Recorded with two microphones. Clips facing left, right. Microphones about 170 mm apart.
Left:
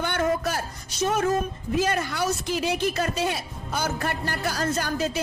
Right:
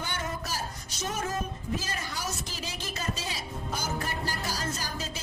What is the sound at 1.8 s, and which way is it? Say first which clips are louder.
Speech: left 12 dB; 65° left (ahead or behind).